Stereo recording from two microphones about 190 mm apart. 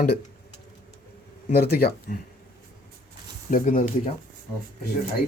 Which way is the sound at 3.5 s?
45° left (ahead or behind).